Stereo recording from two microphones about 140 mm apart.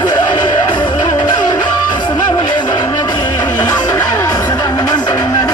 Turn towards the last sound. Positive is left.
turn(degrees=25)  # may be behind; listen again after turning